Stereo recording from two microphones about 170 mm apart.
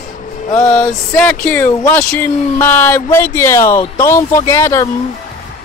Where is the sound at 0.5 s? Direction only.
15° left (ahead or behind).